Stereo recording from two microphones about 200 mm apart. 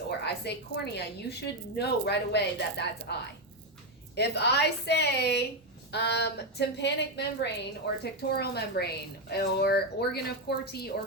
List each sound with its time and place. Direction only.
0.3 s a woman's voice: 55° left (ahead or behind)